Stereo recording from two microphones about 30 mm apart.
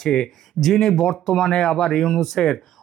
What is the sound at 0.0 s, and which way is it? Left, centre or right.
Speech, centre.